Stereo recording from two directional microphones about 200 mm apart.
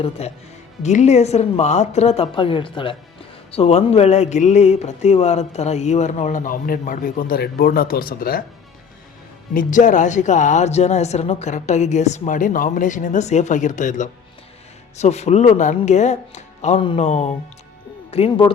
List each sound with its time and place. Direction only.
0.2 s speech: 30° left (ahead or behind); by 8.4 s 45° left (ahead or behind)
9.6 s speech: 40° left (ahead or behind)